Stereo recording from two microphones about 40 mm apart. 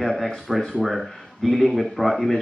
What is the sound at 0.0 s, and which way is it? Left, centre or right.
Speech, centre.